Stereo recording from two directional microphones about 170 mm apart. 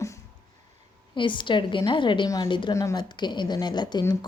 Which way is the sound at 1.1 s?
30° left (ahead or behind).